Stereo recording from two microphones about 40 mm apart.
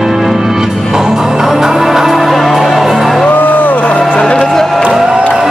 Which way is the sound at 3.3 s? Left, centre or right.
Left.